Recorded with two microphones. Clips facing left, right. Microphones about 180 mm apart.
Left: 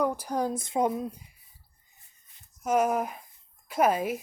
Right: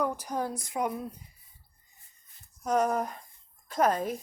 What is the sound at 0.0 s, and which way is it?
Speech, 10° left (ahead or behind).